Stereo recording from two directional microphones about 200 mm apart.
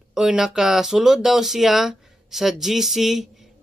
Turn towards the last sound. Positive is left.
turn(degrees=0)  # may be behind; listen again after turning